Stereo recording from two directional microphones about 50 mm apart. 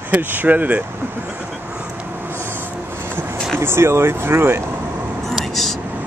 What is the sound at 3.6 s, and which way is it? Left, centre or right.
Speech, right.